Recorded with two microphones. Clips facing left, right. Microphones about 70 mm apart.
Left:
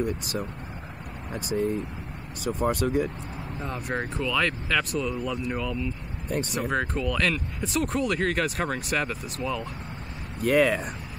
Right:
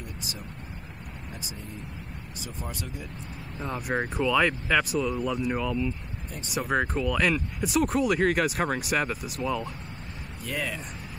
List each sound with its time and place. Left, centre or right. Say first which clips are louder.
0.0 s speech: left 11 dB; left
3.5 s speech: right 2 dB; centre
5.1 s speech: right 1 dB; right
5.4 s speech: right 2 dB; centre
10.4 s speech: left 12 dB; left